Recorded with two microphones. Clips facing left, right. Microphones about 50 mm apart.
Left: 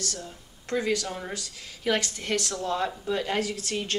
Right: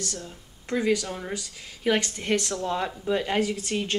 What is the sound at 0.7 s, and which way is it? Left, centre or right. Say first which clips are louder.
Speech: right 2 dB; centre.